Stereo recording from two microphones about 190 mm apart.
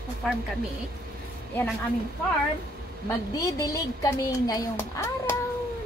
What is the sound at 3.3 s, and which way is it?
Speech, 20° left (ahead or behind).